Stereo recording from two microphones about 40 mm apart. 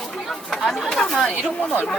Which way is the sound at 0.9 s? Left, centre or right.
Centre.